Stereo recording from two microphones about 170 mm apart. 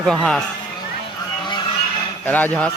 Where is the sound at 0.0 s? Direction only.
5° left (ahead or behind).